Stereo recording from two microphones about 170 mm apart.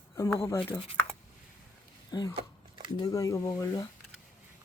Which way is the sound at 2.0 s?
25° left (ahead or behind).